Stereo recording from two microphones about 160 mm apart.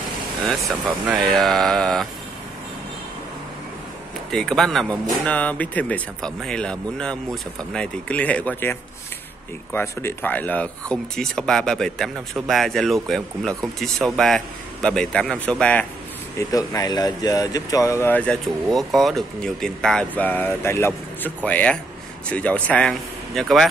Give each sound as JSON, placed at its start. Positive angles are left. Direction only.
{"t": 0.4, "sound": "speech", "side_deg": 0}
{"t": 4.3, "sound": "speech", "side_deg": 5}
{"t": 16.3, "sound": "speech", "side_deg": 20}